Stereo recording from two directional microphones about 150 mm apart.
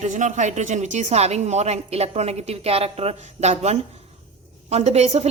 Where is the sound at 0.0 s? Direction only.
55° right (ahead or behind).